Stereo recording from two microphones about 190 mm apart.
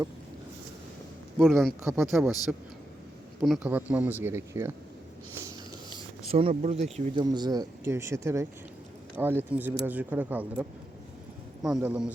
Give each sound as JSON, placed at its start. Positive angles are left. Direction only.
{"t": 1.4, "sound": "speech", "side_deg": 0}
{"t": 3.4, "sound": "speech", "side_deg": -5}
{"t": 6.2, "sound": "speech", "side_deg": -30}
{"t": 7.2, "sound": "speech", "side_deg": -20}